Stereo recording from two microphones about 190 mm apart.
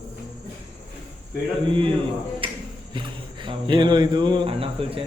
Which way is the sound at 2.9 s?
25° right (ahead or behind).